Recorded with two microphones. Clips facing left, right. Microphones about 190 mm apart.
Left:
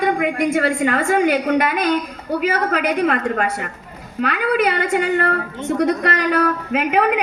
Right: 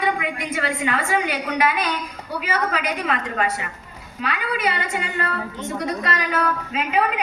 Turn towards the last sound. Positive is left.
turn(degrees=60)  # may be behind; listen again after turning